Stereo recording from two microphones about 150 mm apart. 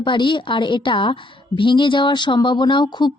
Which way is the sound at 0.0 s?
30° left (ahead or behind).